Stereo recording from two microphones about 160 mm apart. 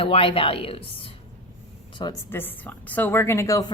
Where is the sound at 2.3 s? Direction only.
10° left (ahead or behind).